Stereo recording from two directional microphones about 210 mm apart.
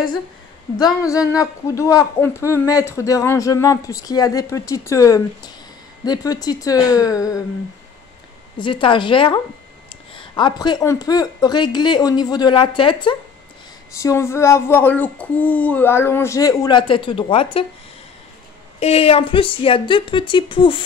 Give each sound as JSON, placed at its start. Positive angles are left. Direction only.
{"t": 1.0, "sound": "speech", "side_deg": 15}
{"t": 8.5, "sound": "speech", "side_deg": 25}
{"t": 14.0, "sound": "speech", "side_deg": 10}
{"t": 18.8, "sound": "speech", "side_deg": 30}